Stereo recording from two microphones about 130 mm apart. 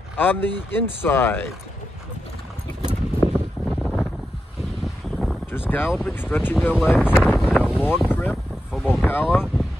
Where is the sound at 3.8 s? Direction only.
5° left (ahead or behind).